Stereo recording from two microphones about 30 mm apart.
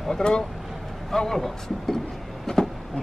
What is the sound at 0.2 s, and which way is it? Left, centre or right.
Speech, left.